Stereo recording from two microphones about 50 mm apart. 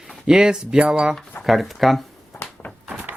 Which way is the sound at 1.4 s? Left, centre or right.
Left.